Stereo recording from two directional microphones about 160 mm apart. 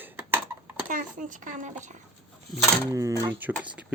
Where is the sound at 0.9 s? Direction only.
55° right (ahead or behind).